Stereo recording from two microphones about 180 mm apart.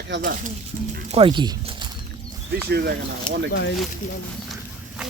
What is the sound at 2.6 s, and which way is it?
Speech, 65° right (ahead or behind).